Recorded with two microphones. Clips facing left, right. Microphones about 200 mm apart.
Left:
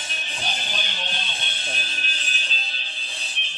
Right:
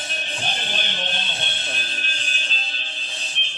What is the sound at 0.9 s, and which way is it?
Music, 50° right (ahead or behind).